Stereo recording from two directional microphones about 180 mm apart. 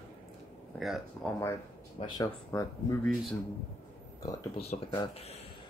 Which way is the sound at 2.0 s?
25° left (ahead or behind).